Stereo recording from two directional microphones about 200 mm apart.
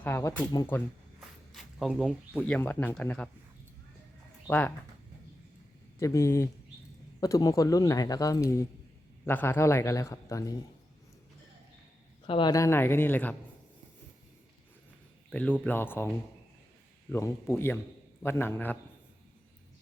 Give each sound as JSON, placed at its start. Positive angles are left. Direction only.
{"t": 0.0, "sound": "speech", "side_deg": 15}
{"t": 1.5, "sound": "speech", "side_deg": 0}
{"t": 4.4, "sound": "speech", "side_deg": 10}
{"t": 6.0, "sound": "speech", "side_deg": 15}
{"t": 12.2, "sound": "speech", "side_deg": 25}
{"t": 15.3, "sound": "speech", "side_deg": 5}